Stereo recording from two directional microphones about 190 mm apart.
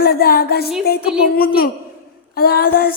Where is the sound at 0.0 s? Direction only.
55° left (ahead or behind).